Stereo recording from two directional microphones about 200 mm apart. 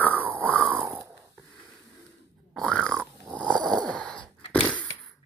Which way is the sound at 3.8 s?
5° left (ahead or behind).